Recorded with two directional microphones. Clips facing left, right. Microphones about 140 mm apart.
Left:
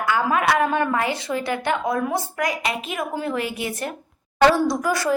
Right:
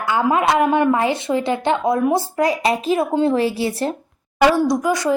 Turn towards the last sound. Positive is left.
turn(degrees=-20)  # may be behind; listen again after turning